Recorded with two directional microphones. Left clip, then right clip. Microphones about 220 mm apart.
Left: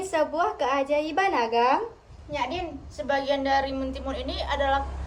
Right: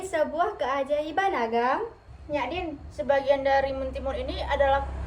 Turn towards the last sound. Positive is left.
turn(degrees=0)  # may be behind; listen again after turning